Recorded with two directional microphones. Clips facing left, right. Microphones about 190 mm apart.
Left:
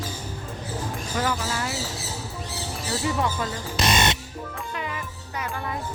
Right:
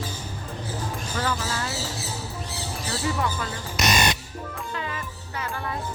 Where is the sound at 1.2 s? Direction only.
15° left (ahead or behind).